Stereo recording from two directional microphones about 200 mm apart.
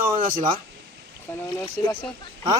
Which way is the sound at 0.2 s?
45° right (ahead or behind).